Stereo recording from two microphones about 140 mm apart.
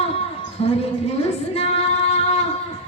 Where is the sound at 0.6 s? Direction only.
50° left (ahead or behind).